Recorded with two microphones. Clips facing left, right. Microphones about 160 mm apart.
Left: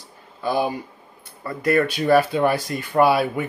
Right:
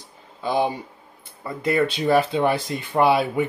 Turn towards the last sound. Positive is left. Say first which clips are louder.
# left 1 dB
turn(degrees=-20)  # may be behind; listen again after turning